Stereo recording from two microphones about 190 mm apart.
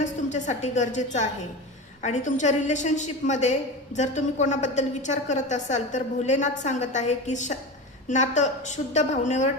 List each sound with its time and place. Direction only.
0.0 s a woman's voice: 40° left (ahead or behind)